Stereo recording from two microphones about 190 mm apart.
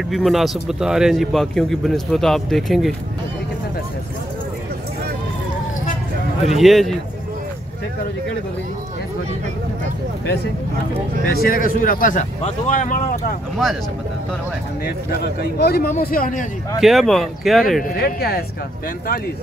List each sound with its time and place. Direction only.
0.1 s a man's voice: centre (ahead or behind)
6.5 s a man's voice: centre (ahead or behind)
11.2 s speech: 50° left (ahead or behind)
15.0 s speech: 55° left (ahead or behind)
16.8 s a man's voice: centre (ahead or behind)
17.8 s speech: 50° left (ahead or behind)